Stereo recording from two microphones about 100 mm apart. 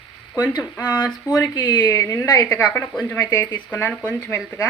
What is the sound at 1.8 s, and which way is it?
Speech, 25° left (ahead or behind).